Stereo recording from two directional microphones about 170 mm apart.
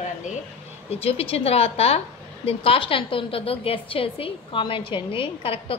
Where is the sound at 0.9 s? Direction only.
35° left (ahead or behind).